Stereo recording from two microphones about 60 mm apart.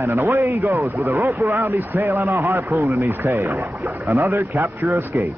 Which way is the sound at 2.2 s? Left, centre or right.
Right.